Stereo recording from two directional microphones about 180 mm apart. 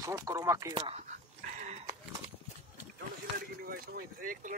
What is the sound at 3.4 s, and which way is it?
Speech, 55° right (ahead or behind).